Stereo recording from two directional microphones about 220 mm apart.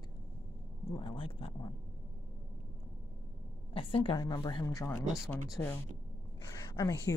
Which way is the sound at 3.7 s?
25° left (ahead or behind).